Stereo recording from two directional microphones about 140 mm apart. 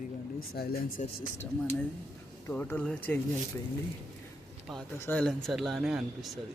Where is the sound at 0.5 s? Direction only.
90° left.